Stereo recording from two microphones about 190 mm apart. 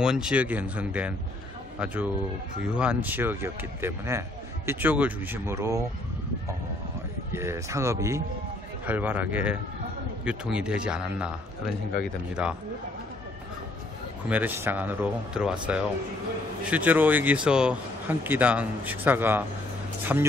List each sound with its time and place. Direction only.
0.0 s a man's voice: 5° right (ahead or behind)
2.7 s a man's voice: 5° right (ahead or behind)
7.3 s a man's voice: 15° right (ahead or behind)
14.3 s a man's voice: 10° right (ahead or behind)